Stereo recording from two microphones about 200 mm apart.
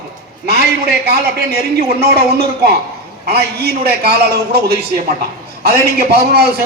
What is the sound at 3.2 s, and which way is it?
Speech, 50° right (ahead or behind).